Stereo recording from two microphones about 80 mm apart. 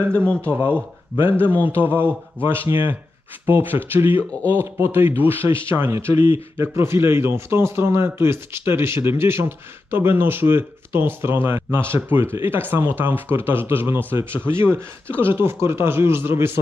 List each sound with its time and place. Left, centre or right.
0.2 s speech: centre
0.5 s speech: right
4.3 s speech: left
4.6 s a man's voice: right